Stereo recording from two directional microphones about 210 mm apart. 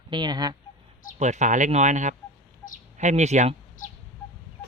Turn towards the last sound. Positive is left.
turn(degrees=-35)  # may be behind; listen again after turning